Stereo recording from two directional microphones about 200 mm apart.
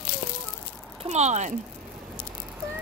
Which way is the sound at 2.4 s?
10° right (ahead or behind).